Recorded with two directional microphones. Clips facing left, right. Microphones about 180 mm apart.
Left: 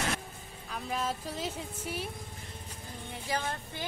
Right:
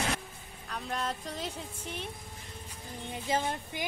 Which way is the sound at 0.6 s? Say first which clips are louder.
Left 1 dB; 5° left (ahead or behind).